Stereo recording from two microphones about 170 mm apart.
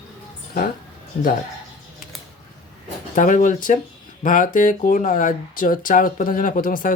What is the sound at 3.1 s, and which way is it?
Speech, 50° left (ahead or behind).